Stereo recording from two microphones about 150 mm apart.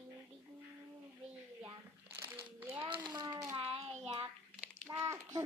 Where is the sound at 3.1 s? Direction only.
30° right (ahead or behind).